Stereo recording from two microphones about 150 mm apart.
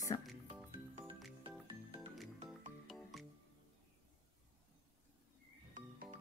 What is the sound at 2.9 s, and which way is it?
Music, centre (ahead or behind).